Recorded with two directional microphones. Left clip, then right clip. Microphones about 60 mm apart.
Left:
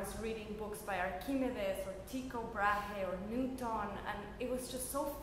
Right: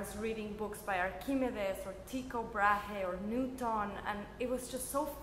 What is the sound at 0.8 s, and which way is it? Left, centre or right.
A woman's voice, right.